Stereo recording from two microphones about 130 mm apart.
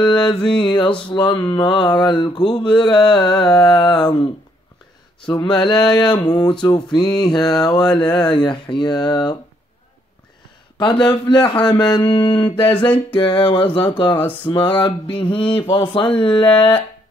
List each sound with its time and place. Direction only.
0.0 s speech: 35° left (ahead or behind)
1.3 s speech: 15° left (ahead or behind)
1.6 s speech: 35° left (ahead or behind)
5.2 s speech: 35° left (ahead or behind)
10.8 s speech: 35° left (ahead or behind)
14.1 s speech: 10° left (ahead or behind)
14.5 s speech: 40° left (ahead or behind)